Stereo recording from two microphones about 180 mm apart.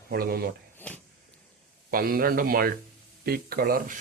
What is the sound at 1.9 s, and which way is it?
Speech, 55° right (ahead or behind).